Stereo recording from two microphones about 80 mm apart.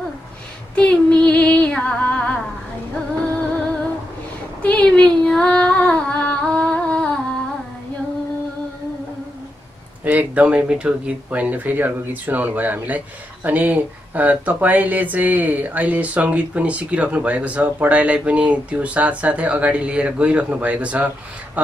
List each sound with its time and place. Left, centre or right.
0.7 s female singing: centre
4.6 s female singing: centre
10.0 s speech: centre